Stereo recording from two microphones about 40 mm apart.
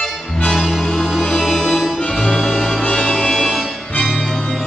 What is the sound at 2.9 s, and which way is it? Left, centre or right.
Music, left.